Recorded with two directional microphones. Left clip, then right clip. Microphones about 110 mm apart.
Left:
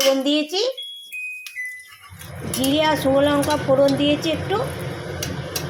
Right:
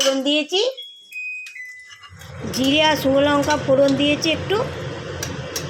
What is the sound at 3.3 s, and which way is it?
Speech, 40° right (ahead or behind).